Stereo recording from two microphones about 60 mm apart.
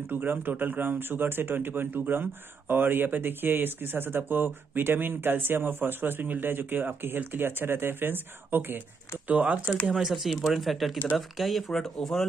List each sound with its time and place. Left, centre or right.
0.0 s speech: right
9.8 s speech: centre